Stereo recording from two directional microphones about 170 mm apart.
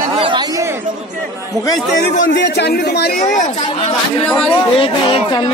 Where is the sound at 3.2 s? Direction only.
45° left (ahead or behind).